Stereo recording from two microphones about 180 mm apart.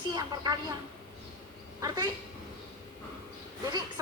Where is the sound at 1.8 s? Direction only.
20° right (ahead or behind).